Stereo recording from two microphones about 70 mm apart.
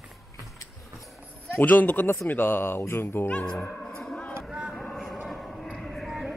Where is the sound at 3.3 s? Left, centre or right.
Centre.